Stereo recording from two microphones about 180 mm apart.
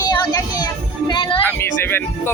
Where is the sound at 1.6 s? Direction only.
15° left (ahead or behind).